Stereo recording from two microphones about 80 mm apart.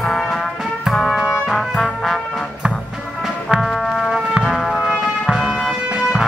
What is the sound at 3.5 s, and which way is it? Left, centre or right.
Music, centre.